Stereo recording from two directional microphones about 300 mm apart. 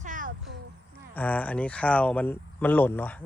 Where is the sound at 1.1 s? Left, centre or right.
Centre.